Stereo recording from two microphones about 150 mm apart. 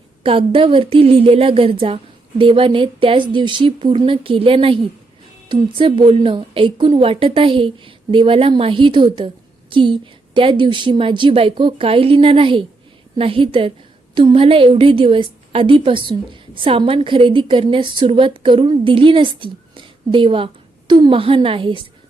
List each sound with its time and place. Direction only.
0.2 s a woman's voice: 35° right (ahead or behind)